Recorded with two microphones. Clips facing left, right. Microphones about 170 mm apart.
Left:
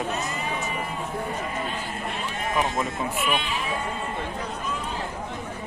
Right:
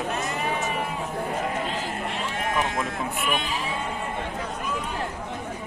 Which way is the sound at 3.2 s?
45° right (ahead or behind).